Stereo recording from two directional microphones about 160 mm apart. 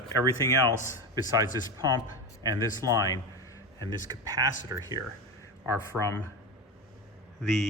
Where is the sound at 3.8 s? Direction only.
20° right (ahead or behind).